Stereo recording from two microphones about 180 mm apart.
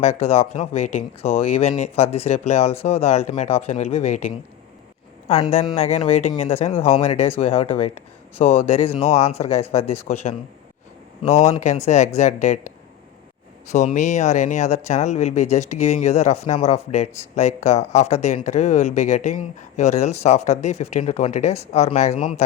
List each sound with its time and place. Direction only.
0.0 s speech: 35° left (ahead or behind)
5.4 s speech: 30° left (ahead or behind)
11.2 s speech: 35° left (ahead or behind)